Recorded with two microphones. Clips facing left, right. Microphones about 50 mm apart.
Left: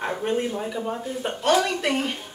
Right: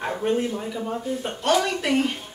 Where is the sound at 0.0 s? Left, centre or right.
Centre.